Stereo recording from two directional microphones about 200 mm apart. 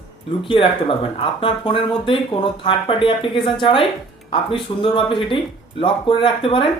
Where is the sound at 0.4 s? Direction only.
25° left (ahead or behind).